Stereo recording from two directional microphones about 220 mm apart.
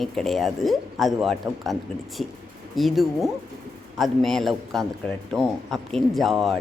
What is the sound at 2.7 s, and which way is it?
A woman's voice, centre (ahead or behind).